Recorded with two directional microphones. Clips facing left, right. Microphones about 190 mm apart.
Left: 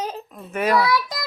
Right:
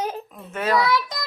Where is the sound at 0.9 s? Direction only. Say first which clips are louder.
Left 1 dB; centre (ahead or behind).